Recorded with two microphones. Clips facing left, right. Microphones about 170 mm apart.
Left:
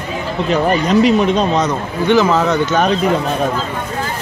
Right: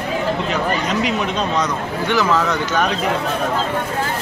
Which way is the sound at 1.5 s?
25° left (ahead or behind).